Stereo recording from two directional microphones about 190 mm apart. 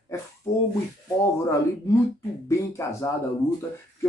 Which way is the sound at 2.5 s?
15° left (ahead or behind).